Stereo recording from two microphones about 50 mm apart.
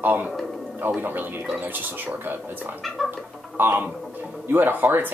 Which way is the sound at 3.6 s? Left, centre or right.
Right.